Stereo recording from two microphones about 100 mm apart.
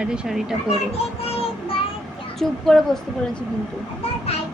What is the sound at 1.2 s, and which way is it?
Child singing, 75° left (ahead or behind).